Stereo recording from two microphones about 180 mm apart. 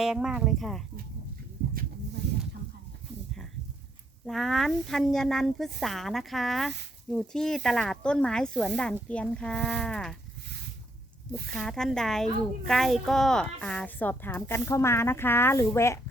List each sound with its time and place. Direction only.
0.0 s speech: 5° right (ahead or behind)
2.2 s a sound: 70° right (ahead or behind)
4.3 s speech: centre (ahead or behind)
11.5 s speech: 5° left (ahead or behind)